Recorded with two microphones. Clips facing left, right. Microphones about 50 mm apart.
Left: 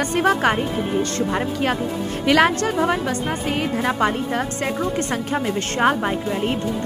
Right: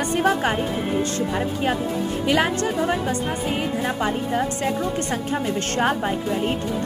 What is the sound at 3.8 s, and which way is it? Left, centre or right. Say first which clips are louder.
Speech: left 3 dB; left.